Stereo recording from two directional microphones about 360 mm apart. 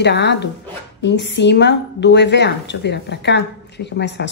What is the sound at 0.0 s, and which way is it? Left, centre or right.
A woman's voice, left.